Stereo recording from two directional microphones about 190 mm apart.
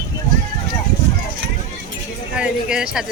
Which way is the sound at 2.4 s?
5° right (ahead or behind).